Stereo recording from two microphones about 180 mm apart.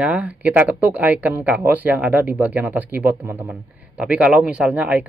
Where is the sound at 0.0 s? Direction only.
5° right (ahead or behind).